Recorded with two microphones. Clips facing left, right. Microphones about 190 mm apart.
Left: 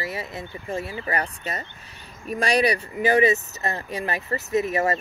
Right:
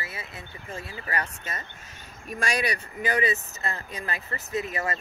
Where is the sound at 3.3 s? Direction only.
40° left (ahead or behind).